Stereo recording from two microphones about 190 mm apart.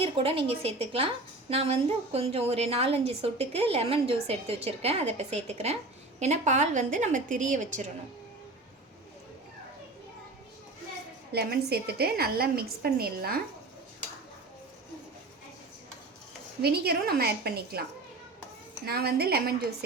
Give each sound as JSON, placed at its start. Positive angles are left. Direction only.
{"t": 0.0, "sound": "a woman's voice", "side_deg": -30}
{"t": 11.3, "sound": "a woman's voice", "side_deg": -55}
{"t": 16.6, "sound": "a woman's voice", "side_deg": -55}
{"t": 18.9, "sound": "a woman's voice", "side_deg": -55}